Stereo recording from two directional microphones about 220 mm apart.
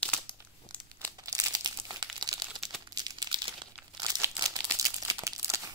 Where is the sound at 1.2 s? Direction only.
15° right (ahead or behind).